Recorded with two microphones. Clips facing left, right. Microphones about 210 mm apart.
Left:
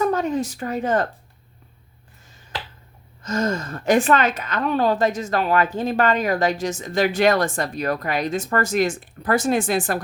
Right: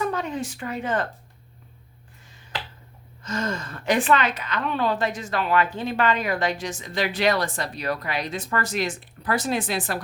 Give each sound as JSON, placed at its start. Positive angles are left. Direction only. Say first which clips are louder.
{"t": 0.0, "sound": "speech", "louder": "left 6 dB", "side_deg": 45}
{"t": 3.2, "sound": "a woman's voice", "louder": "left 5 dB", "side_deg": 40}